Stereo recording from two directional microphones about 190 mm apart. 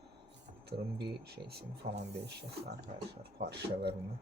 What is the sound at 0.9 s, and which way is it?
Speech, 60° right (ahead or behind).